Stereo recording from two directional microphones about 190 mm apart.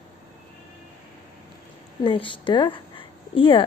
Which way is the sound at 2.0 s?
25° left (ahead or behind).